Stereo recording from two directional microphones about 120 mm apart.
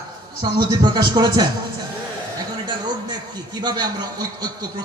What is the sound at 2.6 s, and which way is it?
A man's voice, 35° right (ahead or behind).